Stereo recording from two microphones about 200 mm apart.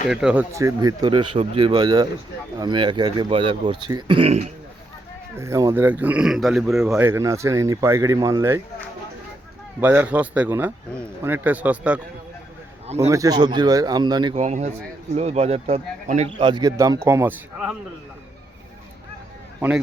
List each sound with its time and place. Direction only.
0.1 s speech: 5° right (ahead or behind)
0.5 s speech: 15° right (ahead or behind); by 4.5 s 30° right (ahead or behind)
5.4 s speech: 15° right (ahead or behind)
9.8 s speech: 10° right (ahead or behind)
13.1 s speech: 15° right (ahead or behind)
14.4 s speech: 35° right (ahead or behind); by 17.7 s 10° right (ahead or behind)
19.5 s speech: 10° right (ahead or behind)